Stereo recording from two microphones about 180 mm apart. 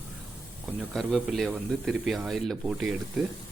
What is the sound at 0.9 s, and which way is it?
Speech, centre (ahead or behind).